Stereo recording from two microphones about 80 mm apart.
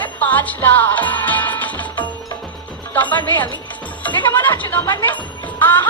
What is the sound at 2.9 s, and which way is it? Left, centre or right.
A woman's voice, left.